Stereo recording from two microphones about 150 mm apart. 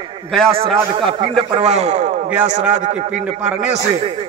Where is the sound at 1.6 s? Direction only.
45° right (ahead or behind).